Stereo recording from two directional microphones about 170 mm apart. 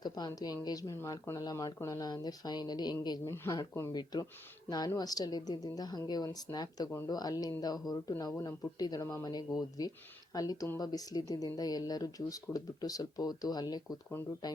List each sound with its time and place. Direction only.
0.0 s speech: 25° left (ahead or behind)